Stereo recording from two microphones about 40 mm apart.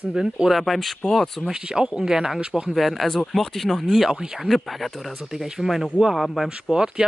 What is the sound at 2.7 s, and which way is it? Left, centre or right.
Speech, centre.